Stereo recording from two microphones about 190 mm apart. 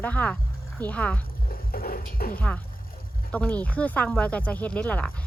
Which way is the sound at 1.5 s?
50° left (ahead or behind).